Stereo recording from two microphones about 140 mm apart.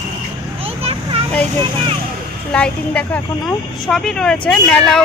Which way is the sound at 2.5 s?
5° left (ahead or behind).